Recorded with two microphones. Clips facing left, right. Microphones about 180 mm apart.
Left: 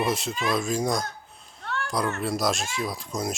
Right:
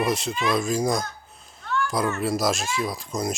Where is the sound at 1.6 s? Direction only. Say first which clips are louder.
Right 5 dB; 65° left (ahead or behind).